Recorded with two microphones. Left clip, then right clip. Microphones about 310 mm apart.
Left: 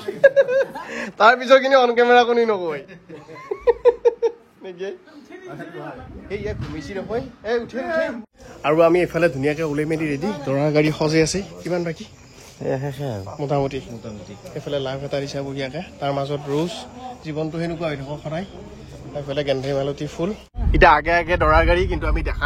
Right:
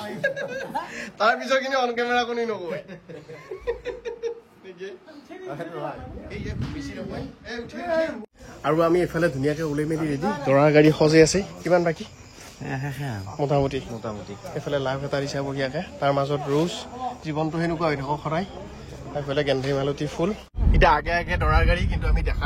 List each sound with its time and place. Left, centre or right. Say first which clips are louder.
0.0 s a man's voice: left 13 dB; centre
3.6 s a sound: left 15 dB; centre
6.3 s a man's voice: left 8 dB; centre
13.4 s a man's voice: even; centre
14.5 s a man's voice: left 1 dB; centre
20.7 s a man's voice: left 6 dB; centre